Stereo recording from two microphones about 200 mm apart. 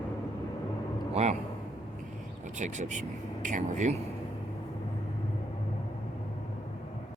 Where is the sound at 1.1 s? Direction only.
35° right (ahead or behind).